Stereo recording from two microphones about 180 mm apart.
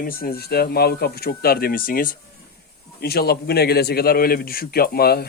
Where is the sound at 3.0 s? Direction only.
60° left (ahead or behind).